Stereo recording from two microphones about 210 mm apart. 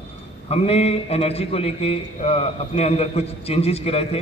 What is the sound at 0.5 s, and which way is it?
A man's voice, 30° left (ahead or behind).